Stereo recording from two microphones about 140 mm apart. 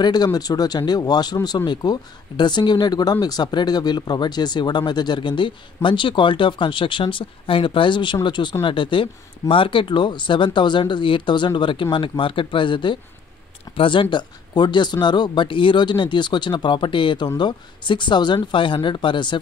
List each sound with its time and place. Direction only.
0.0 s speech: 30° left (ahead or behind)